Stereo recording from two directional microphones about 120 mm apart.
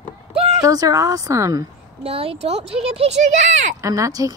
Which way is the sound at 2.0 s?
55° right (ahead or behind).